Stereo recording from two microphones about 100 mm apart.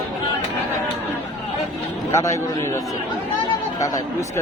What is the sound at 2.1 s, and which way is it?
Speech, 30° left (ahead or behind).